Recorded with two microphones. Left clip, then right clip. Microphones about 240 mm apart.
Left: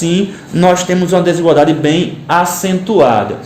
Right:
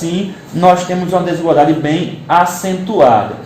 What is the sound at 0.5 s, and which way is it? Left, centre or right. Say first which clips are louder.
A man's voice: even; left.